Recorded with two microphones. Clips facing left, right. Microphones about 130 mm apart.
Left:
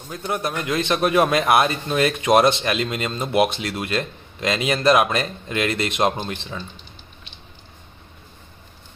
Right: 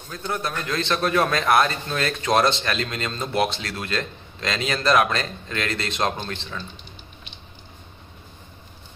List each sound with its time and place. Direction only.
0.1 s speech: 15° left (ahead or behind)